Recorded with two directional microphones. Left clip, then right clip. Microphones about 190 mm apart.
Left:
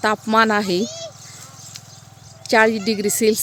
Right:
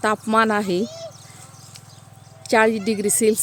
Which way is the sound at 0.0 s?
5° left (ahead or behind).